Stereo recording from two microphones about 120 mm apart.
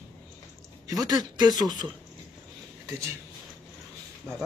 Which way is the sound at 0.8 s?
30° right (ahead or behind).